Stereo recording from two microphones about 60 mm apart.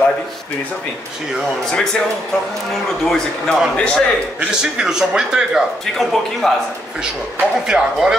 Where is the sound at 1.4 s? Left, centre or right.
Centre.